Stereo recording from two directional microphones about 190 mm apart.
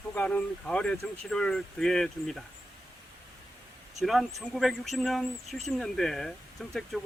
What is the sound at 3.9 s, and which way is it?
Speech, centre (ahead or behind).